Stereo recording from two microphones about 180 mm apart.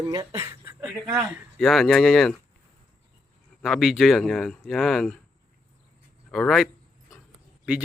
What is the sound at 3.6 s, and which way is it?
Speech, centre (ahead or behind).